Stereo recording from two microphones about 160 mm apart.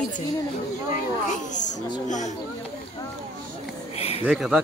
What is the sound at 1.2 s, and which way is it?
A child's voice, 50° left (ahead or behind).